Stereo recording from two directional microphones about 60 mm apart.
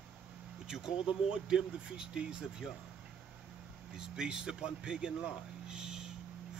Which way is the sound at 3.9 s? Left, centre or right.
Centre.